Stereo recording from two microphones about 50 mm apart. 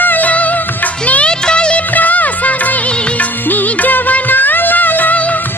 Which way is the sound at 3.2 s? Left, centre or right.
Left.